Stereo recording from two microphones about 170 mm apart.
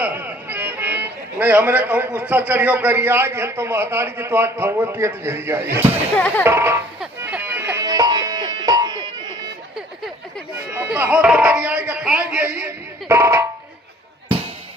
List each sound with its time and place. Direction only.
0.0 s speech: 10° right (ahead or behind)
6.1 s speech: 5° left (ahead or behind)
6.4 s speech: 15° right (ahead or behind)
7.2 s music: 10° right (ahead or behind)
10.7 s speech: 10° right (ahead or behind)